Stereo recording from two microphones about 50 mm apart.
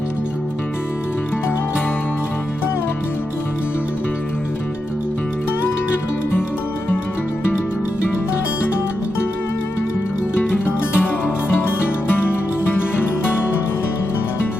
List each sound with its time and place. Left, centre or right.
10.3 s music: left